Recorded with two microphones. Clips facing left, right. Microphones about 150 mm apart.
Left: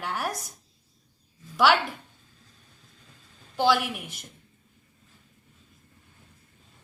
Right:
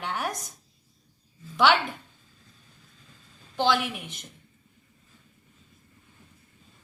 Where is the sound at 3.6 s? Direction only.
5° left (ahead or behind).